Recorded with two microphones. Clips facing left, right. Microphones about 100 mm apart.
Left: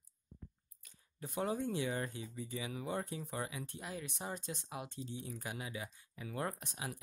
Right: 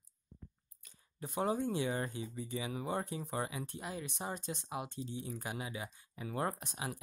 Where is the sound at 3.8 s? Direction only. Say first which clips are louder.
Right 2 dB; 15° right (ahead or behind).